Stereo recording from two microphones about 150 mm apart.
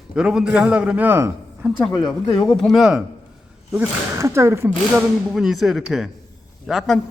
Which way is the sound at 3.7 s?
20° right (ahead or behind).